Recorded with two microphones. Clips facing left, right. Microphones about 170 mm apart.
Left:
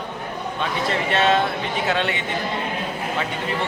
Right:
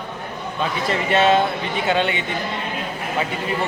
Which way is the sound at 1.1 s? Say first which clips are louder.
Right 3 dB; centre (ahead or behind).